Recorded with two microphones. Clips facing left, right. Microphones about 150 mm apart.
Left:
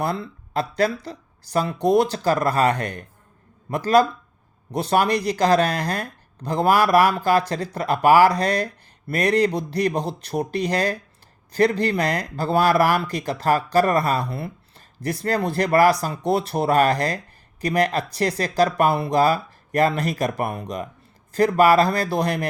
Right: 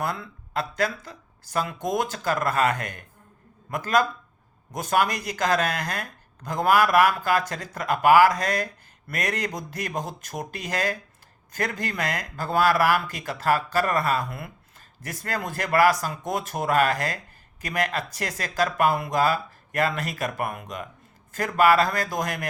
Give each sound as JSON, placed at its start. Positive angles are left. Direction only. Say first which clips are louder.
{"t": 0.0, "sound": "speech", "louder": "left 4 dB", "side_deg": 35}